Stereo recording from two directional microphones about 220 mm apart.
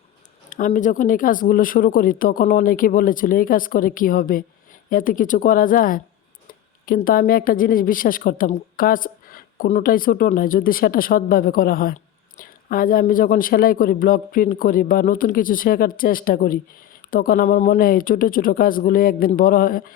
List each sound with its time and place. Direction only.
0.5 s speech: 35° left (ahead or behind)